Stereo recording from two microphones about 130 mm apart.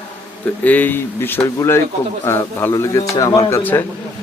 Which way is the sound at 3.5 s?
15° left (ahead or behind).